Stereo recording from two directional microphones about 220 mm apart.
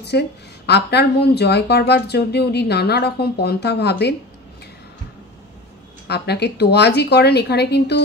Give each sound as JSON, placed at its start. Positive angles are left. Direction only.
{"t": 0.0, "sound": "speech", "side_deg": 50}
{"t": 6.0, "sound": "speech", "side_deg": 50}